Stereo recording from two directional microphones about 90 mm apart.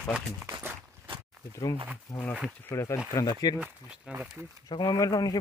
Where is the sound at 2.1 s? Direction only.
35° left (ahead or behind).